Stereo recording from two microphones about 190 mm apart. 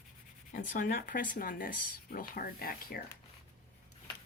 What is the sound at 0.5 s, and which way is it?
Speech, 45° left (ahead or behind).